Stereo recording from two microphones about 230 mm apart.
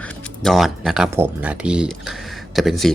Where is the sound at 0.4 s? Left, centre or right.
Centre.